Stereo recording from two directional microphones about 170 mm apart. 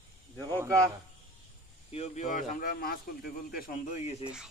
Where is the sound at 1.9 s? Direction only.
40° left (ahead or behind); by 3.0 s 60° left (ahead or behind).